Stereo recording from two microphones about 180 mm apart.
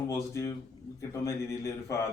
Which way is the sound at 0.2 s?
15° left (ahead or behind).